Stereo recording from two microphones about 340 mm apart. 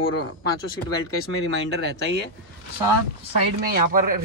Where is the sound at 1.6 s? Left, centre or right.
Right.